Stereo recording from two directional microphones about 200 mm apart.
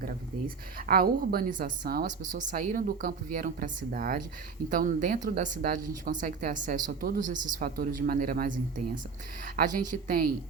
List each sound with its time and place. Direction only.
0.0 s a woman's voice: 45° right (ahead or behind)
9.6 s a woman's voice: 40° right (ahead or behind)